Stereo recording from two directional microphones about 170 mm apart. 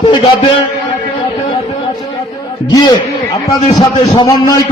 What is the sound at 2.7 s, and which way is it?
A man's voice, 25° left (ahead or behind).